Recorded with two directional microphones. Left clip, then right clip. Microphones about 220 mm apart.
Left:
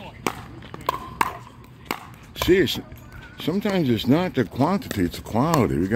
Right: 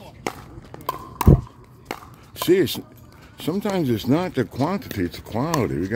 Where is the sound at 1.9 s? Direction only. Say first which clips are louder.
Left 3 dB; 55° left (ahead or behind).